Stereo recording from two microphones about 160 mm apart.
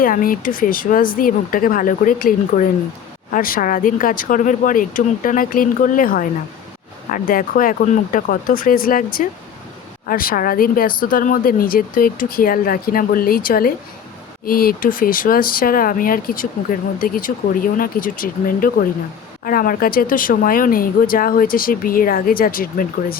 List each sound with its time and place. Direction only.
0.0 s speech: 60° left (ahead or behind)
10.1 s speech: 65° left (ahead or behind)